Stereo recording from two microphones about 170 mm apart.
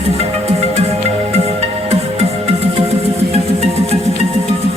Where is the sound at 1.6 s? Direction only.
35° right (ahead or behind).